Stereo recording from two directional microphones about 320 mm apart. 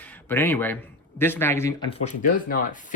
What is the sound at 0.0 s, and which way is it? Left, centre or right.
Speech, centre.